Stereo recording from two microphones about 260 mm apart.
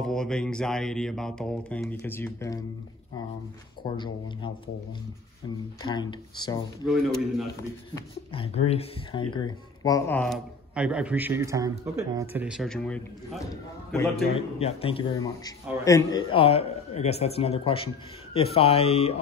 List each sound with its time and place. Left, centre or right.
0.0 s speech: centre
3.8 s a man's voice: centre
5.8 s speech: centre
6.9 s speech: centre
7.9 s speech: left; by 13.4 s centre
14.6 s a man's voice: left